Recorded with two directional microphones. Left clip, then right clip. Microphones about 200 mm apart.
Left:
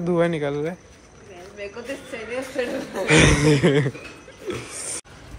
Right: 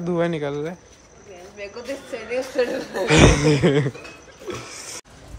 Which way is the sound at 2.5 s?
55° right (ahead or behind).